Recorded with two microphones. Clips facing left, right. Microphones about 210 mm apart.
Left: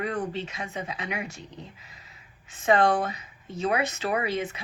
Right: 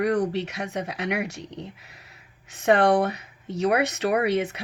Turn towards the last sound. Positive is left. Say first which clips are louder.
# right 5 dB
turn(degrees=-65)  # may be behind; listen again after turning